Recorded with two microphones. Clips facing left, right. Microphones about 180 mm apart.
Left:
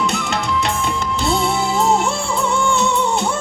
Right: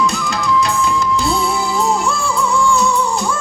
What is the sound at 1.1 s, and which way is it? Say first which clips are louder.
Music: right 1 dB; 25° left (ahead or behind).